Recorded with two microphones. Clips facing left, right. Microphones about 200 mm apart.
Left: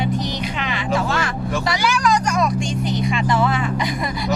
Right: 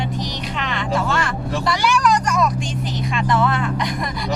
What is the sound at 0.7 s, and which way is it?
Music, centre (ahead or behind).